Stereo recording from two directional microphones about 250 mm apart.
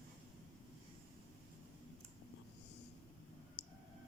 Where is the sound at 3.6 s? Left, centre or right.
Left.